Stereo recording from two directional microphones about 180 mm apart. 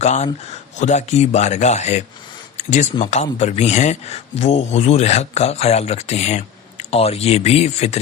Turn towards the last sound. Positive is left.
turn(degrees=35)  # may be behind; listen again after turning